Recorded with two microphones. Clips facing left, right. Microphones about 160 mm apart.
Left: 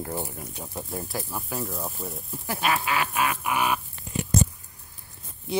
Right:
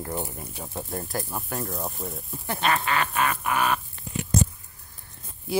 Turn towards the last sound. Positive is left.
turn(degrees=0)  # may be behind; listen again after turning